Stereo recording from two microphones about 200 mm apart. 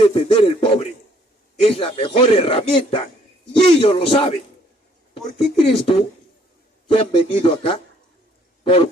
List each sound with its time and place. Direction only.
0.0 s speech: 25° left (ahead or behind)
5.6 s speech: 30° left (ahead or behind)
8.6 s owl: 25° left (ahead or behind)